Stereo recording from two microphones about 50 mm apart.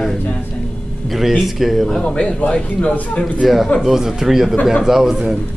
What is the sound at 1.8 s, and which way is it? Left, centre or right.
A man's voice, centre.